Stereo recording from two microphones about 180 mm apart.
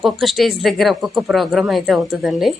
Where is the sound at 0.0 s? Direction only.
Centre (ahead or behind).